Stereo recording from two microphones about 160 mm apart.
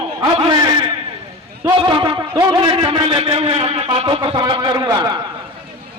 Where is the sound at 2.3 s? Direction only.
30° right (ahead or behind).